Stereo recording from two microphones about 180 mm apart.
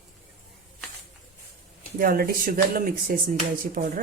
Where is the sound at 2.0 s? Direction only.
55° right (ahead or behind).